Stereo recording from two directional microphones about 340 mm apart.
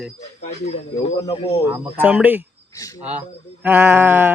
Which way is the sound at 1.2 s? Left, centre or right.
Centre.